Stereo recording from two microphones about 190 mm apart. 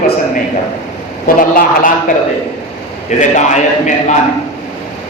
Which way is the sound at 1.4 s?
45° left (ahead or behind).